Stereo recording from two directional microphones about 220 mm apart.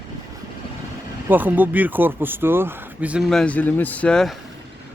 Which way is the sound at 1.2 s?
10° right (ahead or behind).